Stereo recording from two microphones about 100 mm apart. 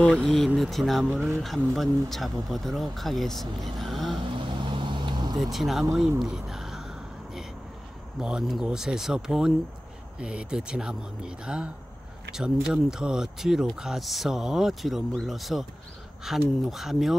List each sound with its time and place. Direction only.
0.0 s speech: 5° left (ahead or behind)
4.4 s vehicle: 55° right (ahead or behind)
5.4 s speech: centre (ahead or behind)
6.2 s a sound: 5° right (ahead or behind)
8.2 s speech: 5° right (ahead or behind)